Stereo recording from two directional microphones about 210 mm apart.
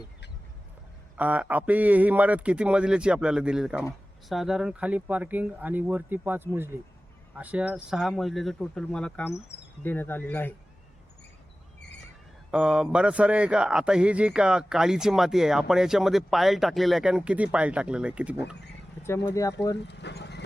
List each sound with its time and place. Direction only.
1.1 s a man's voice: 5° right (ahead or behind); by 10.5 s 10° left (ahead or behind)
12.5 s speech: 5° right (ahead or behind)
19.0 s speech: 10° left (ahead or behind)
19.9 s horse: 55° left (ahead or behind)